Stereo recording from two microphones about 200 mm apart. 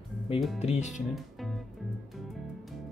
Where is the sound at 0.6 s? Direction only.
35° left (ahead or behind).